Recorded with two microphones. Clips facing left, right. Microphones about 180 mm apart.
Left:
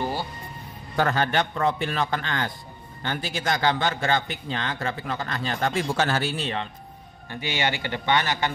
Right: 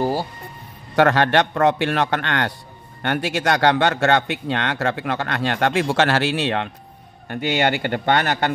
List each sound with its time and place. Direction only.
0.0 s music: 35° right (ahead or behind)
0.9 s a man's voice: 80° right
7.2 s speech: 60° right (ahead or behind)